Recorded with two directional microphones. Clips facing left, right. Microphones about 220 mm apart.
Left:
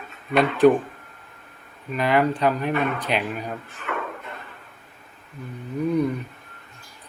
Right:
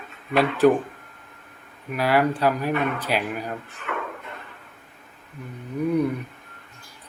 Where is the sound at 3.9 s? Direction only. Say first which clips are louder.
Left 1 dB; 35° left (ahead or behind).